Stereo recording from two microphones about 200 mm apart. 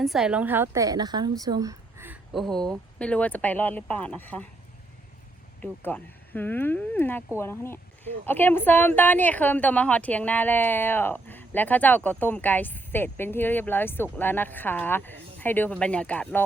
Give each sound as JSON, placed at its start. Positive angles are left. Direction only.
{"t": 0.0, "sound": "a woman's voice", "side_deg": 0}
{"t": 2.3, "sound": "a woman's voice", "side_deg": 0}
{"t": 5.6, "sound": "a woman's voice", "side_deg": 10}